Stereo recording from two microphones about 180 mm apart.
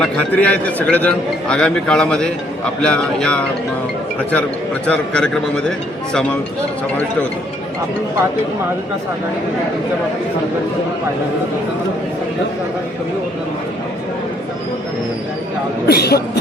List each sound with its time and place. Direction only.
0.0 s a man's voice: 5° left (ahead or behind)
4.9 s a man's voice: 5° left (ahead or behind)
15.9 s speech: 60° left (ahead or behind)